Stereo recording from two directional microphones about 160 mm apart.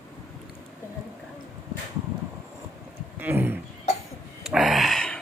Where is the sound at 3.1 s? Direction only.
10° right (ahead or behind).